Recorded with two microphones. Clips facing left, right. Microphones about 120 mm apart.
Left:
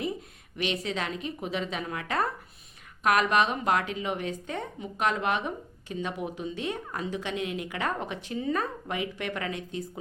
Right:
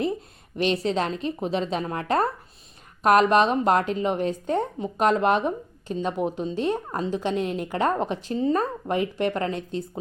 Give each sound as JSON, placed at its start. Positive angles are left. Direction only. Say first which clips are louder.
{"t": 0.5, "sound": "a woman's voice", "louder": "right 7 dB", "side_deg": -35}